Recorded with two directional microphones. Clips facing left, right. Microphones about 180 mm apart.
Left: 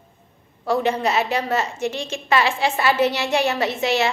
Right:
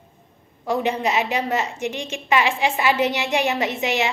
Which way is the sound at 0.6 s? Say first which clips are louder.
Left 2 dB; 15° right (ahead or behind).